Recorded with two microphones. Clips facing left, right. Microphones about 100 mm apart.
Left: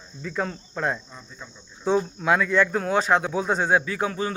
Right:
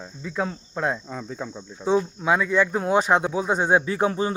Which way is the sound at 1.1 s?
90° right.